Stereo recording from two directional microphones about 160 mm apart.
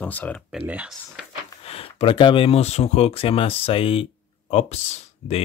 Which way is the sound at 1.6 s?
35° left (ahead or behind).